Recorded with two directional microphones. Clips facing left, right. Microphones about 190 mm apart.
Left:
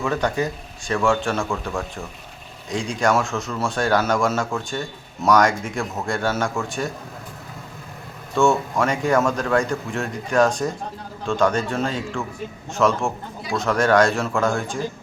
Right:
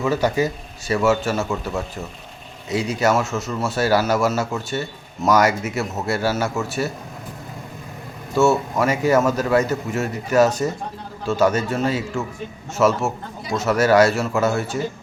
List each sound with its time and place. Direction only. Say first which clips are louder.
0.0 s speech: right 3 dB; 5° right (ahead or behind)
8.4 s speech: right 1 dB; 5° right (ahead or behind)